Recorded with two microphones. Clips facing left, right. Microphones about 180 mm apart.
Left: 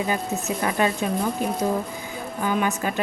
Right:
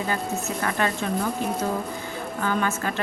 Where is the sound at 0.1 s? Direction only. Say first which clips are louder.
Left 2 dB; 15° left (ahead or behind).